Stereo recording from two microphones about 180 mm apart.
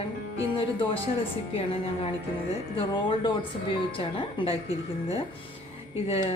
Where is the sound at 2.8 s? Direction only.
30° left (ahead or behind).